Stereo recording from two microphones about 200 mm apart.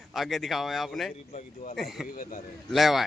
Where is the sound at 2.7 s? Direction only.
Centre (ahead or behind).